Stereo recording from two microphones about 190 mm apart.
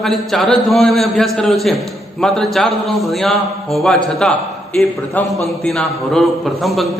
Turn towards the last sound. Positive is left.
turn(degrees=0)  # may be behind; listen again after turning